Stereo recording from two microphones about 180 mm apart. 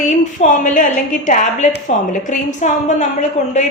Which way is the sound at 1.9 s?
40° left (ahead or behind).